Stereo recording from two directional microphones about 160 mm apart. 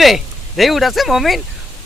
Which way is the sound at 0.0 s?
Centre (ahead or behind).